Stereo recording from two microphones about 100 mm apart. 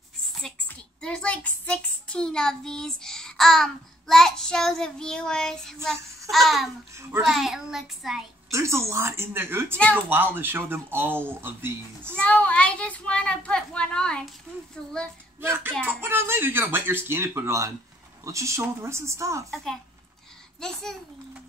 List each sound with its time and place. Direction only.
0.7 s a child's voice: 10° left (ahead or behind); by 8.2 s 5° right (ahead or behind)
8.5 s speech: 30° right (ahead or behind)
12.2 s a child's voice: 15° left (ahead or behind)
15.4 s speech: 20° right (ahead or behind)
19.5 s a child's voice: 5° left (ahead or behind)